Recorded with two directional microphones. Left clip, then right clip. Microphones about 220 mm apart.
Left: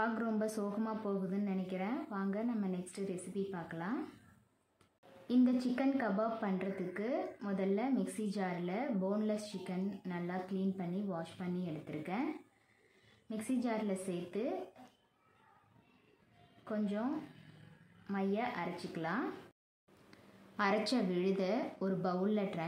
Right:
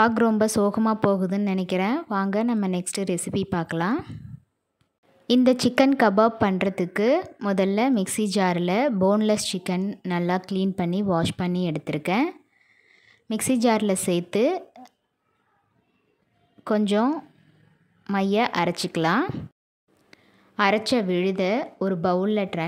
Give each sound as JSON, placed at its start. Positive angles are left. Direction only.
{"t": 0.0, "sound": "a woman's voice", "side_deg": -45}
{"t": 5.2, "sound": "a woman's voice", "side_deg": -45}
{"t": 13.3, "sound": "a woman's voice", "side_deg": -50}
{"t": 16.6, "sound": "a woman's voice", "side_deg": -50}
{"t": 20.1, "sound": "a woman's voice", "side_deg": -40}